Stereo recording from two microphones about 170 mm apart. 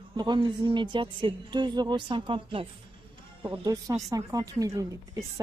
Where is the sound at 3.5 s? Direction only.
20° right (ahead or behind).